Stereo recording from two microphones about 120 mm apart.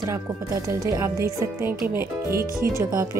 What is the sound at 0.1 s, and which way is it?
Speech, 25° right (ahead or behind).